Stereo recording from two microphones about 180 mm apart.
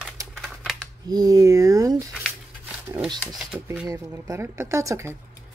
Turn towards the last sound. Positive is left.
turn(degrees=-15)  # may be behind; listen again after turning